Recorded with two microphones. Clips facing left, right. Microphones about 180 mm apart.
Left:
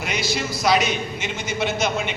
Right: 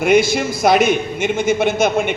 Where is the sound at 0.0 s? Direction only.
50° right (ahead or behind).